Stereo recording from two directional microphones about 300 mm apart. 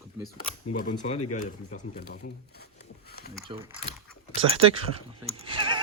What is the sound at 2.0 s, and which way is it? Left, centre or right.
Speech, left.